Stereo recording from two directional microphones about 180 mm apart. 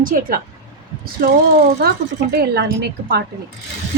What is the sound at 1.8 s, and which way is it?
Speech, 60° right (ahead or behind).